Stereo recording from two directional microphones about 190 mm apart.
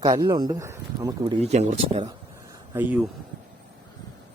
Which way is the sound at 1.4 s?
35° right (ahead or behind).